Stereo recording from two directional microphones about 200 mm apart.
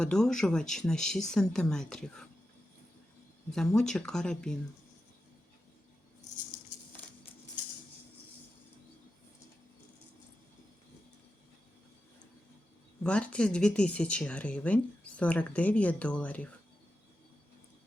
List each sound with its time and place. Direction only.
0.0 s speech: 5° left (ahead or behind)
3.5 s speech: 5° left (ahead or behind)
13.0 s speech: 5° left (ahead or behind)